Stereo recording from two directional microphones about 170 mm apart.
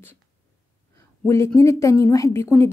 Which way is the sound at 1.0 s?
15° left (ahead or behind).